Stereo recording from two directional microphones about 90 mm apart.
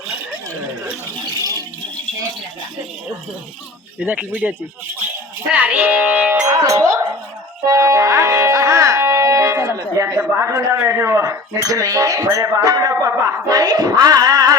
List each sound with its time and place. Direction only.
1.3 s rattle: 45° right (ahead or behind)
4.0 s speech: 20° right (ahead or behind)
5.5 s speech: 20° right (ahead or behind)
6.4 s music: 35° right (ahead or behind)
7.7 s speech: 35° right (ahead or behind)